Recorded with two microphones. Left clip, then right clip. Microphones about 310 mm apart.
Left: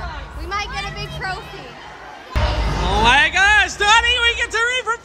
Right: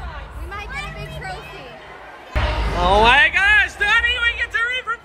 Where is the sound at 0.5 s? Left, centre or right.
Left.